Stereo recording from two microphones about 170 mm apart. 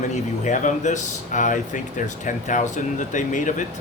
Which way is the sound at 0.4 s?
45° left (ahead or behind).